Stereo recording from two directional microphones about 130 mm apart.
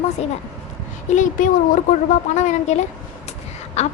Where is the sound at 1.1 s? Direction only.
80° left.